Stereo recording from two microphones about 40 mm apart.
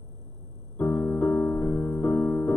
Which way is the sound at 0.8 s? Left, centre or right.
Left.